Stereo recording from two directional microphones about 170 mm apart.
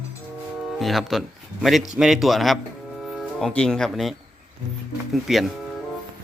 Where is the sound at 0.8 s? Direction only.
Centre (ahead or behind).